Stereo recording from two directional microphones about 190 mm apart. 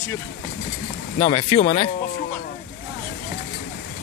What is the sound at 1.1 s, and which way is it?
Speech, 35° left (ahead or behind).